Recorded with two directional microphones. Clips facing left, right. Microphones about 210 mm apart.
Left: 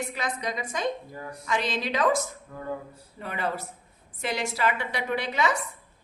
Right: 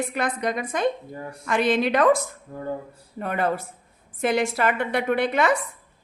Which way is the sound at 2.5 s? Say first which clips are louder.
Right 4 dB; 30° right (ahead or behind).